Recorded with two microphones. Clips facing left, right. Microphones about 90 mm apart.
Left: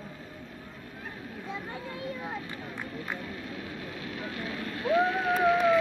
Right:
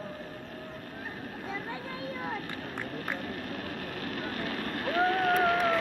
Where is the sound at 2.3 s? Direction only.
60° right (ahead or behind).